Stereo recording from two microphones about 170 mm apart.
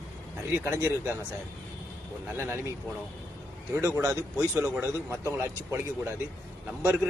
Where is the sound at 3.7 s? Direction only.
15° right (ahead or behind).